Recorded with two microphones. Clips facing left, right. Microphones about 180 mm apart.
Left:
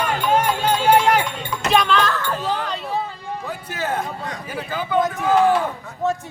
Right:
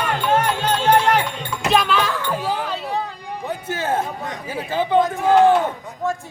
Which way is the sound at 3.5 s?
25° right (ahead or behind).